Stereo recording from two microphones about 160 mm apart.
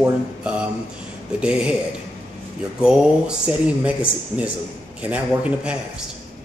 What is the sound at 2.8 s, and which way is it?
Speech, 5° right (ahead or behind).